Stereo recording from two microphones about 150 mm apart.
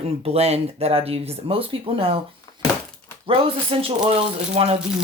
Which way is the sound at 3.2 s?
35° right (ahead or behind).